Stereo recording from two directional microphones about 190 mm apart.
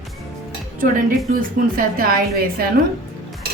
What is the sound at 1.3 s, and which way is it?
A woman's voice, 50° right (ahead or behind).